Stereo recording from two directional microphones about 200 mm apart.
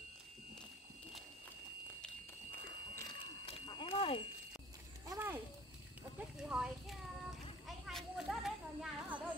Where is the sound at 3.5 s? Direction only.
25° left (ahead or behind).